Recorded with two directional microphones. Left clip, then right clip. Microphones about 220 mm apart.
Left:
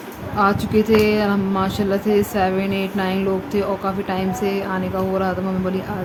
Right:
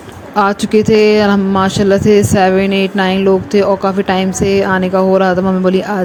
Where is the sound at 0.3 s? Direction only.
30° right (ahead or behind).